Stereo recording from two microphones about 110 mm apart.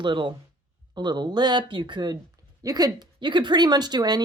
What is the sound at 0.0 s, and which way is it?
A woman's voice, 45° right (ahead or behind).